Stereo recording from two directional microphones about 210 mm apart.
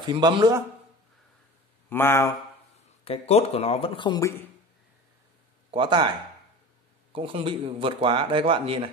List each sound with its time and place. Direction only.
0.0 s speech: 20° right (ahead or behind)
1.9 s speech: 10° left (ahead or behind)
3.1 s speech: 30° left (ahead or behind); by 4.5 s 15° left (ahead or behind)
5.7 s speech: 25° right (ahead or behind)